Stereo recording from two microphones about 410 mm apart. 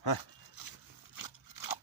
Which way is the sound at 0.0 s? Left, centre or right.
Left.